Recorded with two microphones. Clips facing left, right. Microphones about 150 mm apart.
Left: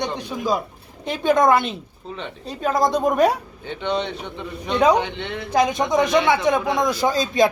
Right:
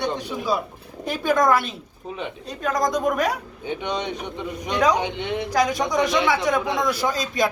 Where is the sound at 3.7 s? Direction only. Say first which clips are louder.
Left 2 dB; 15° right (ahead or behind).